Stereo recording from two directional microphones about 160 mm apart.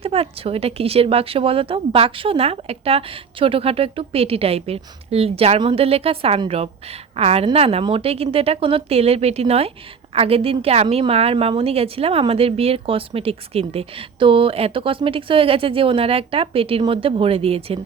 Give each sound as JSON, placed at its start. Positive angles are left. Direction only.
{"t": 0.0, "sound": "a woman's voice", "side_deg": -40}